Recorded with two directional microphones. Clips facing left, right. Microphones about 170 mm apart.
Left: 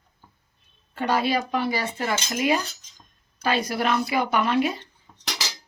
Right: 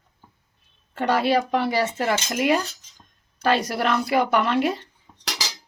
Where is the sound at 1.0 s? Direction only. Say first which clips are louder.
Right 3 dB; 65° right (ahead or behind).